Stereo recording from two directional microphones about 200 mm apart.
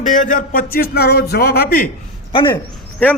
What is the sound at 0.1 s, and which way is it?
A man's voice, 40° left (ahead or behind).